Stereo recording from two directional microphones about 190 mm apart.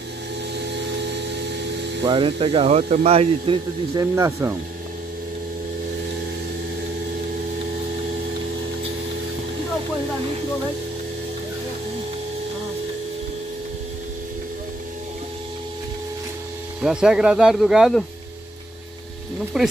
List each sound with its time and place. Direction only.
0.6 s a sound: 65° right (ahead or behind)
2.0 s speech: 25° right (ahead or behind)
3.9 s speech: 15° right (ahead or behind)
16.8 s speech: 5° right (ahead or behind)
19.6 s speech: centre (ahead or behind)